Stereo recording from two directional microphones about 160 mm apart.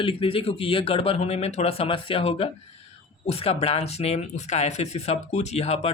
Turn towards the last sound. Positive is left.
turn(degrees=40)  # may be behind; listen again after turning